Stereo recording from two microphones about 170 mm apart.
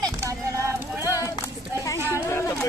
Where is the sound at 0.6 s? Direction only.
15° right (ahead or behind).